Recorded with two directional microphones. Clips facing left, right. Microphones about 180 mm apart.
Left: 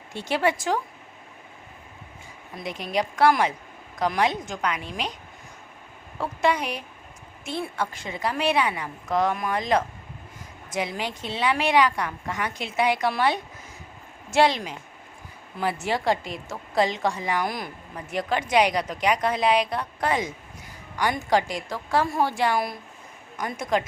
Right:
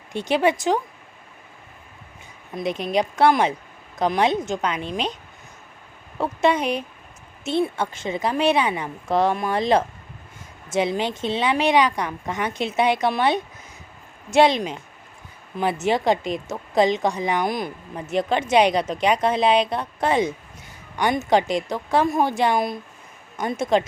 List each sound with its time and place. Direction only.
0.1 s a woman's voice: 20° right (ahead or behind)
2.6 s a woman's voice: 20° right (ahead or behind)
6.1 s a woman's voice: 25° right (ahead or behind)